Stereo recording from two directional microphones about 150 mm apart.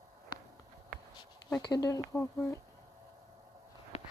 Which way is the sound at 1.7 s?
20° left (ahead or behind).